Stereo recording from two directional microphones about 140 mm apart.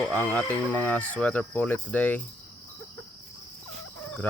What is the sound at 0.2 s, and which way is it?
Speech, 10° left (ahead or behind).